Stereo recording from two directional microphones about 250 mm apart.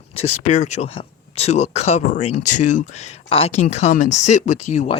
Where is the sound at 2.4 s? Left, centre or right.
Left.